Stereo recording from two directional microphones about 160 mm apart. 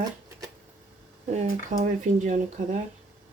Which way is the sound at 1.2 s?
45° right (ahead or behind).